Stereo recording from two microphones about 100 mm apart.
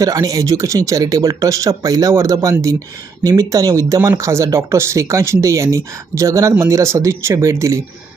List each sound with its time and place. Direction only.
0.0 s speech: 35° right (ahead or behind)